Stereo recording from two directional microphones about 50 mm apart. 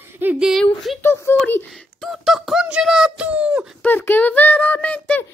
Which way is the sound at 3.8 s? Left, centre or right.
Left.